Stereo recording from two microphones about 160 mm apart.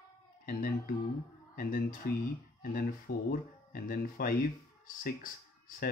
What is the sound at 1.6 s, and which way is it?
Speech, 60° left (ahead or behind).